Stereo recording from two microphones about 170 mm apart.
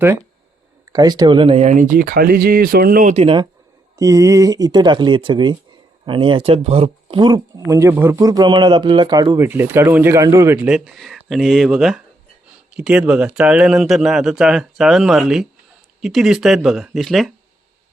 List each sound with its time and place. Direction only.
0.9 s speech: 25° right (ahead or behind)
3.9 s speech: 20° right (ahead or behind); by 17.3 s centre (ahead or behind)